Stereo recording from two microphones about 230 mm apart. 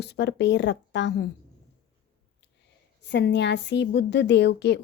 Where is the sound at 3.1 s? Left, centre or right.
Left.